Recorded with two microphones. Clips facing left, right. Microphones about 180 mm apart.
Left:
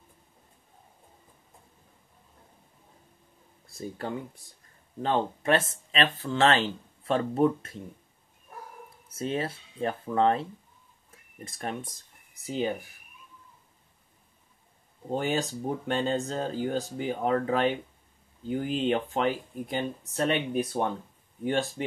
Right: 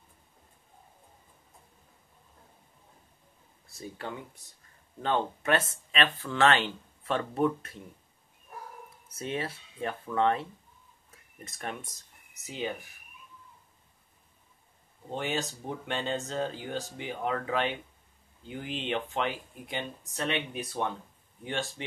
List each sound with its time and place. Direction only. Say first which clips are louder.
3.7 s speech: left 5 dB; 35° left (ahead or behind)
9.1 s speech: left 4 dB; 30° left (ahead or behind)
11.4 s speech: left 4 dB; 30° left (ahead or behind)
15.0 s speech: left 5 dB; 40° left (ahead or behind)